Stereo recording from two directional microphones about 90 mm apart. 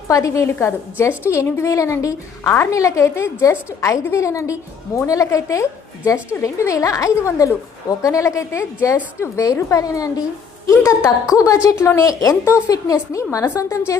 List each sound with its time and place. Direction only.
0.1 s a woman's voice: 35° left (ahead or behind)